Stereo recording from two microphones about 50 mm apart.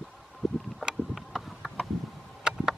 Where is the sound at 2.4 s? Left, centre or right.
Centre.